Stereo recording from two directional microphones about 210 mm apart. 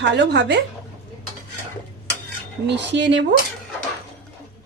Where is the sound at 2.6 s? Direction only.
55° right (ahead or behind).